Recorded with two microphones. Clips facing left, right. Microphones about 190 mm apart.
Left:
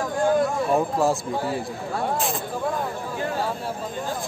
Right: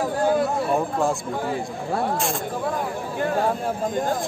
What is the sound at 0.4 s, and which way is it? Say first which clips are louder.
Speech: left 1 dB; centre (ahead or behind).